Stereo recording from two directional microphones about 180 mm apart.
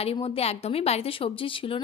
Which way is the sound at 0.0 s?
35° left (ahead or behind).